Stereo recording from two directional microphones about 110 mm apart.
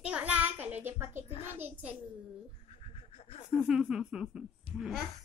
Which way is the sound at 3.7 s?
5° right (ahead or behind).